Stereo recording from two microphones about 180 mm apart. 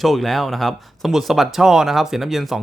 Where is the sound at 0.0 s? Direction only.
Centre (ahead or behind).